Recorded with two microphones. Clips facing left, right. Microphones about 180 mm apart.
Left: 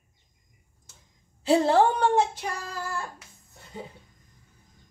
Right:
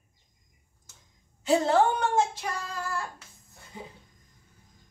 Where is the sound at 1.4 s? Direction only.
35° left (ahead or behind).